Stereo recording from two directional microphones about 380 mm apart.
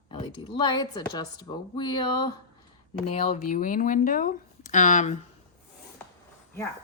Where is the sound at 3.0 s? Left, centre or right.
Centre.